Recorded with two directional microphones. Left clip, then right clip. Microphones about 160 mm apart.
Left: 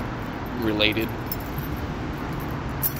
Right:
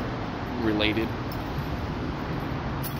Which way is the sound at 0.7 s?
Centre (ahead or behind).